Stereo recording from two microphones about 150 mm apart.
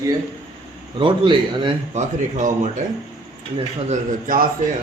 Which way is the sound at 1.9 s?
55° right (ahead or behind).